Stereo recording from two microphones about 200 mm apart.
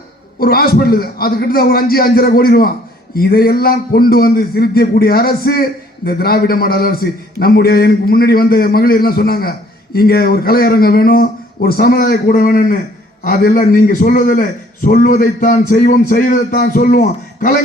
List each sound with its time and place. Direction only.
0.3 s a man's voice: 50° left (ahead or behind)